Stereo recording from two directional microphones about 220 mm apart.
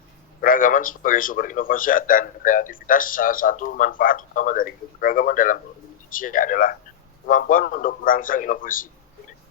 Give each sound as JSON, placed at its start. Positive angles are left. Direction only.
{"t": 0.4, "sound": "a man's voice", "side_deg": 40}